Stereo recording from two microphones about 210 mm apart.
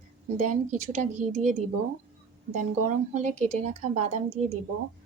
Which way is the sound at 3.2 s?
35° right (ahead or behind).